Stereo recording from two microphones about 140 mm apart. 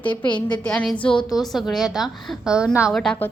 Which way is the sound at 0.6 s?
5° left (ahead or behind).